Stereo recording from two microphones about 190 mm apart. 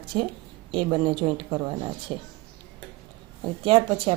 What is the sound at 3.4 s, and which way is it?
Speech, 30° right (ahead or behind).